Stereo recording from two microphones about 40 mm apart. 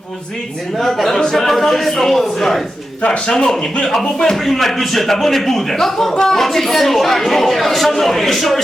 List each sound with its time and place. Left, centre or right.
0.8 s a man's voice: centre
3.1 s a man's voice: centre